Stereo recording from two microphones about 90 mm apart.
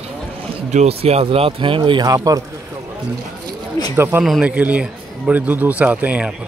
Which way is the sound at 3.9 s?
25° right (ahead or behind).